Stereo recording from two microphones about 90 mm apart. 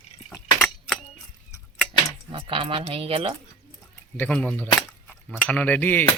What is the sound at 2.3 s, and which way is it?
Speech, 80° right.